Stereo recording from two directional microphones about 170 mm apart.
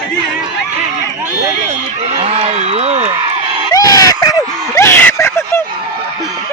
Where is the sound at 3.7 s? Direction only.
20° left (ahead or behind).